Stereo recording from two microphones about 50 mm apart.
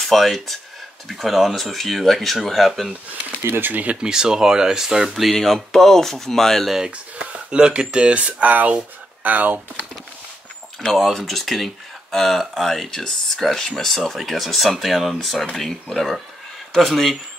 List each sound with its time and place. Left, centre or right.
0.0 s speech: centre
3.1 s speech: right
3.8 s speech: right; by 5.3 s centre
5.3 s speech: centre
6.7 s speech: centre; by 9.6 s right
10.8 s speech: centre